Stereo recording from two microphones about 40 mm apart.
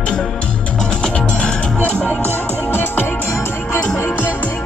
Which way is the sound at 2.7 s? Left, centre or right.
Left.